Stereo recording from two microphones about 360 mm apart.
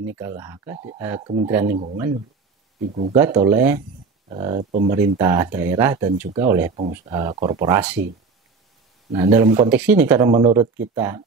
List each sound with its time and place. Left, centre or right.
0.0 s speech: centre
2.9 s speech: centre
5.1 s speech: centre
9.1 s speech: centre